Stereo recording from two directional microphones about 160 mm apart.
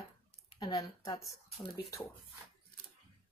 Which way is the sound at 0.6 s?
25° left (ahead or behind).